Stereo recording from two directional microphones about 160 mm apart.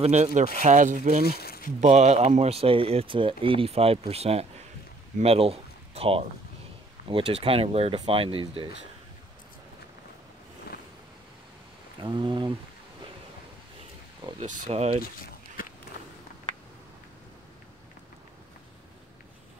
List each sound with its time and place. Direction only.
0.0 s speech: 45° right (ahead or behind)
1.2 s speech: 75° left (ahead or behind)
1.8 s speech: 45° right (ahead or behind)
12.0 s speech: 30° right (ahead or behind)
14.4 s speech: 40° right (ahead or behind)
15.6 s a sound: 65° left (ahead or behind)